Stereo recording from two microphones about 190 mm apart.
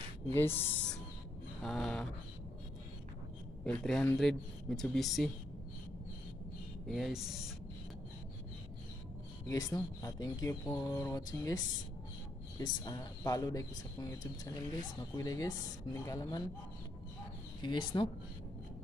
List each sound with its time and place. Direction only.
0.3 s speech: 10° left (ahead or behind)
1.6 s speech: centre (ahead or behind)
3.6 s speech: 5° left (ahead or behind)
6.9 s speech: centre (ahead or behind)
9.5 s speech: 20° left (ahead or behind)
17.6 s speech: 25° left (ahead or behind)